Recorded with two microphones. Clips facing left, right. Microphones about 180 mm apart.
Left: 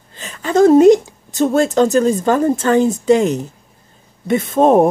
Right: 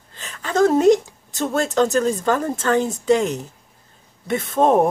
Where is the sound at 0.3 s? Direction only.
15° left (ahead or behind).